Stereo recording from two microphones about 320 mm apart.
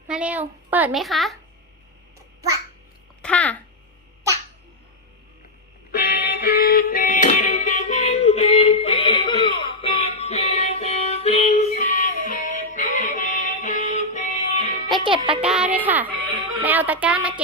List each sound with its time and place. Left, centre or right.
0.1 s a child's voice: centre
3.2 s a child's voice: centre
5.9 s music: left
15.0 s music: centre
15.4 s a child's voice: centre